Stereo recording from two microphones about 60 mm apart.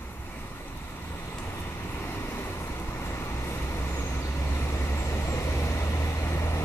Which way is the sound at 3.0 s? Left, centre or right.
Left.